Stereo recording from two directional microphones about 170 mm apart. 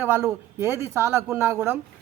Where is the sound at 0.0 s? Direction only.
15° right (ahead or behind).